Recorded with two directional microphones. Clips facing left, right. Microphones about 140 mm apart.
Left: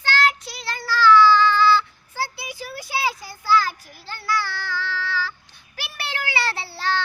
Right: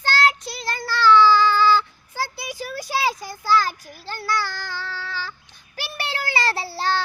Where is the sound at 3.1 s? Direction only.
40° right (ahead or behind).